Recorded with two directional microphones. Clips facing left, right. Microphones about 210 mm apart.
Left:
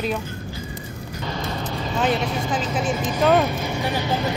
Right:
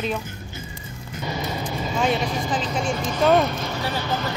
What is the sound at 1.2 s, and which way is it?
Music, 10° right (ahead or behind).